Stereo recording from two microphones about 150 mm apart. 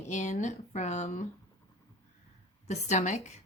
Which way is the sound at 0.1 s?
50° left (ahead or behind).